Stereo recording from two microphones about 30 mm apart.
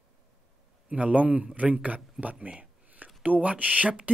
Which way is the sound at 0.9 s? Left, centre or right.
Right.